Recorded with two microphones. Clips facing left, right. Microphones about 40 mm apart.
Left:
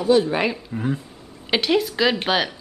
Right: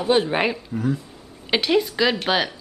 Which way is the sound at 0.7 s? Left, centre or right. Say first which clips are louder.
Right 1 dB; left.